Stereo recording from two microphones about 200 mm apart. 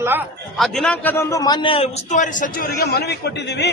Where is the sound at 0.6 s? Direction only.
5° left (ahead or behind); by 3.7 s 55° left (ahead or behind).